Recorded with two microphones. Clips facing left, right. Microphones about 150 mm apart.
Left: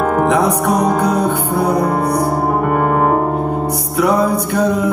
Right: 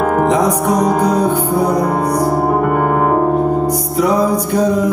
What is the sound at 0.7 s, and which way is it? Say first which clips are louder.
Music: right 1 dB; 60° left (ahead or behind).